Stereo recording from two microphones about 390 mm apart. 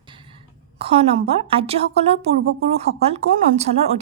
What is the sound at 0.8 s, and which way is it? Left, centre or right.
A woman's voice, centre.